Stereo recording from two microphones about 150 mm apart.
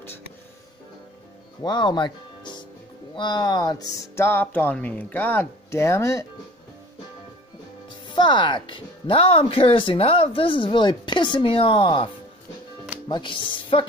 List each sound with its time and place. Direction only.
1.6 s speech: 30° left (ahead or behind)
8.1 s speech: 30° left (ahead or behind)
13.1 s speech: 35° left (ahead or behind)